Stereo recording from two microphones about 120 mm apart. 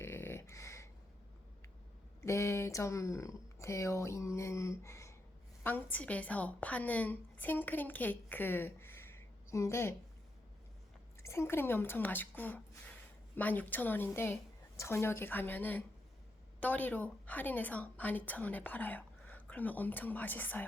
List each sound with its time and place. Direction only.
0.0 s a sound: 20° left (ahead or behind)
2.2 s speech: 25° left (ahead or behind)
5.6 s a woman's voice: 15° left (ahead or behind)
11.2 s a woman's voice: 20° left (ahead or behind)